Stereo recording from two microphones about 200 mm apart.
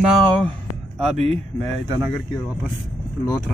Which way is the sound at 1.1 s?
30° right (ahead or behind).